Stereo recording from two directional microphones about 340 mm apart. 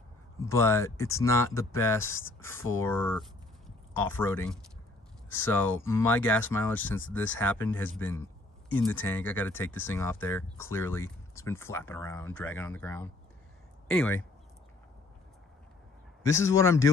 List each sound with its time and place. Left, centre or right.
0.5 s a man's voice: centre
16.2 s a man's voice: centre